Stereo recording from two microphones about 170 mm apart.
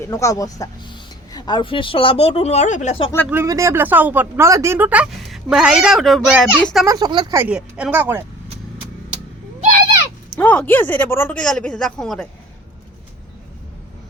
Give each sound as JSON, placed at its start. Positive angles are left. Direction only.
{"t": 0.0, "sound": "speech", "side_deg": 15}
{"t": 3.2, "sound": "speech", "side_deg": -15}
{"t": 6.8, "sound": "speech", "side_deg": -20}
{"t": 7.3, "sound": "speech", "side_deg": -5}
{"t": 10.3, "sound": "speech", "side_deg": 10}